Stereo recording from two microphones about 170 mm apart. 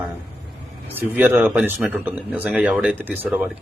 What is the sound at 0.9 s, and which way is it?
Speech, 10° right (ahead or behind).